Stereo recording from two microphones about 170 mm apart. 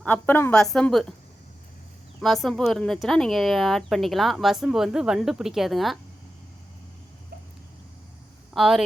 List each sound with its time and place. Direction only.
0.0 s speech: 10° left (ahead or behind)
2.2 s speech: centre (ahead or behind)
8.5 s speech: centre (ahead or behind)